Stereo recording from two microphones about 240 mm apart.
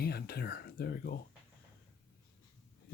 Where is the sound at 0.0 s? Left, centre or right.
Left.